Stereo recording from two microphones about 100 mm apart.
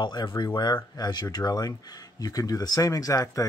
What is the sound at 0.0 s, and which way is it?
Speech, 50° left (ahead or behind).